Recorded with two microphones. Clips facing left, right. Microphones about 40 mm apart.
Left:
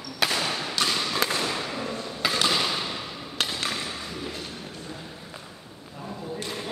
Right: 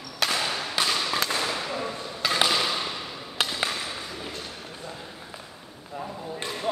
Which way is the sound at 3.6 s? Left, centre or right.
Centre.